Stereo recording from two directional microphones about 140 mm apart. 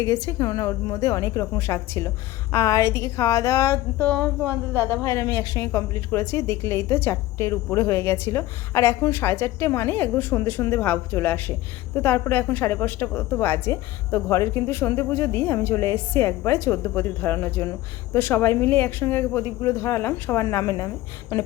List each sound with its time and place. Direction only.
0.0 s speech: 20° left (ahead or behind)
4.7 s a woman's voice: 15° right (ahead or behind)
5.0 s a woman's voice: 20° left (ahead or behind)